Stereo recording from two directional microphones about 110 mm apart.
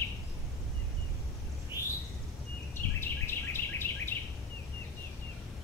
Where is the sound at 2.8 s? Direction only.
20° left (ahead or behind).